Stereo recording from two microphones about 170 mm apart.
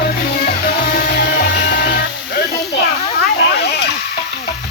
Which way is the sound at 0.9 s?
70° left (ahead or behind).